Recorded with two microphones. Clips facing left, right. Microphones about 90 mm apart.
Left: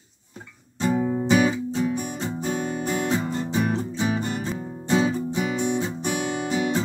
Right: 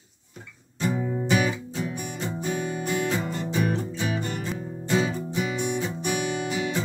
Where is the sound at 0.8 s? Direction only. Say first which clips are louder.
Left 4 dB; 30° left (ahead or behind).